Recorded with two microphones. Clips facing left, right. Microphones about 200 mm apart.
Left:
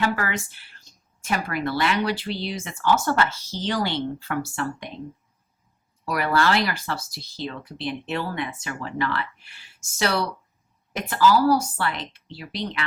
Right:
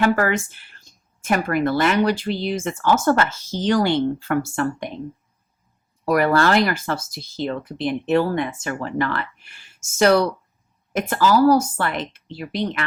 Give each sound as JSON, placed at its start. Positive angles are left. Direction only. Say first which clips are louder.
{"t": 0.0, "sound": "a woman's voice", "louder": "right 7 dB", "side_deg": -50}
{"t": 6.1, "sound": "a woman's voice", "louder": "right 5 dB", "side_deg": -45}